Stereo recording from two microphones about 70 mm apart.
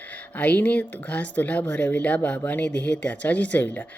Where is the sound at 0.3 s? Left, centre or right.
Left.